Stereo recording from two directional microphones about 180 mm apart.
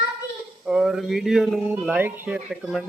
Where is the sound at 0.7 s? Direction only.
5° right (ahead or behind).